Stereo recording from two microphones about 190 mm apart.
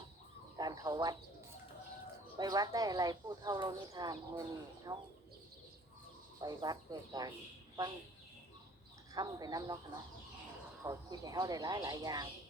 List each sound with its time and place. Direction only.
0.5 s speech: 20° right (ahead or behind)
2.4 s speech: 20° right (ahead or behind)
6.4 s speech: 20° right (ahead or behind)
9.1 s speech: 20° right (ahead or behind)